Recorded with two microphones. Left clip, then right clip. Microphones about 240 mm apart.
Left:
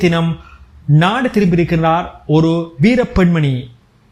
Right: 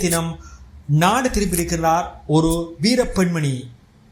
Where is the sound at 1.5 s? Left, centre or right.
Left.